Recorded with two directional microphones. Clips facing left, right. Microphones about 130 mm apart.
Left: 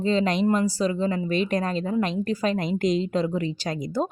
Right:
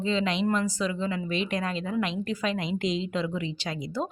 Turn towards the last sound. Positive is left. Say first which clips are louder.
# left 5 dB
turn(degrees=45)  # may be behind; listen again after turning